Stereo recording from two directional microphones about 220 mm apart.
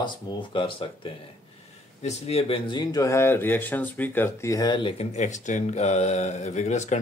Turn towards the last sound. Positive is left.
turn(degrees=30)  # may be behind; listen again after turning